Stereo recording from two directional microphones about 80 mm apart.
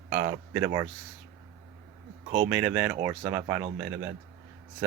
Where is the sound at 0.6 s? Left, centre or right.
Right.